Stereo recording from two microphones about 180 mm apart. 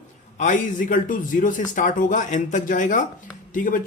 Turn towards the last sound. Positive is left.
turn(degrees=50)  # may be behind; listen again after turning